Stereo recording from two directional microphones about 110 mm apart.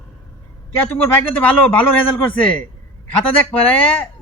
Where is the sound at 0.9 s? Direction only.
15° left (ahead or behind).